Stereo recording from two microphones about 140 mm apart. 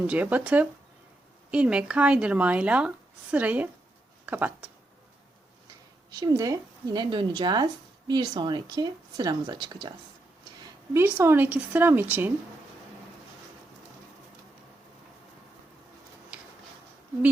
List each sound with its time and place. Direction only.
0.1 s speech: 10° right (ahead or behind)
6.1 s speech: 30° right (ahead or behind); by 12.3 s 15° right (ahead or behind)
16.3 s a sound: 10° right (ahead or behind)